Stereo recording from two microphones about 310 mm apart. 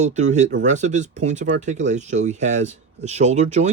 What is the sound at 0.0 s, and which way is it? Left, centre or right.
Speech, right.